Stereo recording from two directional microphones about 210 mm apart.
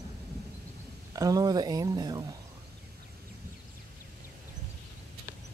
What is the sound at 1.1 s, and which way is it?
Speech, 15° right (ahead or behind).